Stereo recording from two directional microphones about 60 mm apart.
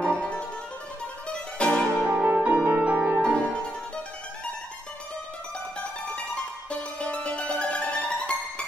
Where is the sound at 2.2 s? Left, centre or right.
Right.